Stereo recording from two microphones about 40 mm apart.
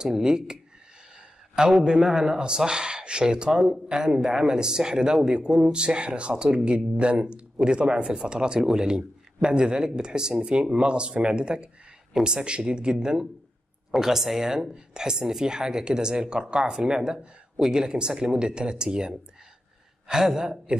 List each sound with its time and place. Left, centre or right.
0.0 s a man's voice: centre